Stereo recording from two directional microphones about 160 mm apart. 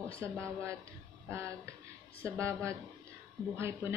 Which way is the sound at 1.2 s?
15° right (ahead or behind).